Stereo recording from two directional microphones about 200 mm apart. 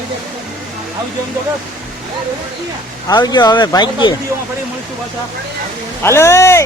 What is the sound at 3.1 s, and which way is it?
Speech, 20° left (ahead or behind).